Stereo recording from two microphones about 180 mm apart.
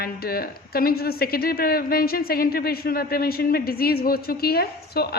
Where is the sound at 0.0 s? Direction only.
60° left (ahead or behind).